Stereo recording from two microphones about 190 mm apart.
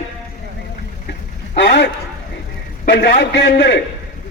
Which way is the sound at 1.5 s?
65° left (ahead or behind).